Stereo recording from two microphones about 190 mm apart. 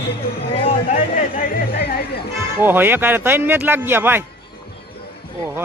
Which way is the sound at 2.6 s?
10° right (ahead or behind).